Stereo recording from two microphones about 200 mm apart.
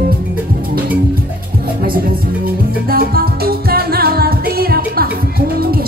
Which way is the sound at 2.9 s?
50° right (ahead or behind).